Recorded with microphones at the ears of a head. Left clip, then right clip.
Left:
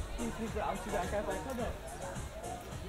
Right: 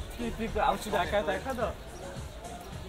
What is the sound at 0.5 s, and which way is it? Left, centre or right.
Speech, right.